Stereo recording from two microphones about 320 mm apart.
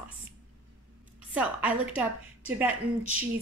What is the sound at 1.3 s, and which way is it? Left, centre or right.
A woman's voice, centre.